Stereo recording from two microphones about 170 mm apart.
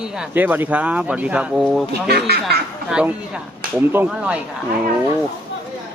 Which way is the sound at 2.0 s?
70° right (ahead or behind).